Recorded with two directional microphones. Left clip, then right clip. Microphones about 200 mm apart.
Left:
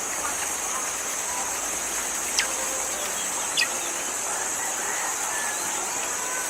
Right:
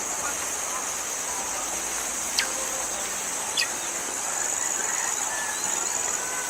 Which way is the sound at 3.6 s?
55° left (ahead or behind).